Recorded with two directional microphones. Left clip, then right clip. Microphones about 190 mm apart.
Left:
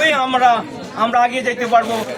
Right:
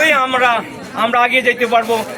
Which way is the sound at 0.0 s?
5° right (ahead or behind).